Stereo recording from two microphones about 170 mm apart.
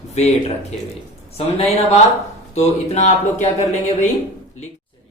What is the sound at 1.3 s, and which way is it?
Speech, 40° left (ahead or behind).